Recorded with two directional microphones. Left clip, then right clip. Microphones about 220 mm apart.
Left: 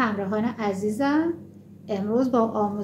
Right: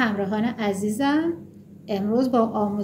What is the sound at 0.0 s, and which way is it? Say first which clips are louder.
A woman's voice: right 1 dB; 35° right (ahead or behind).